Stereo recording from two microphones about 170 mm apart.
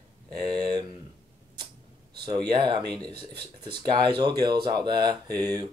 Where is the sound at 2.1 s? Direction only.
25° right (ahead or behind).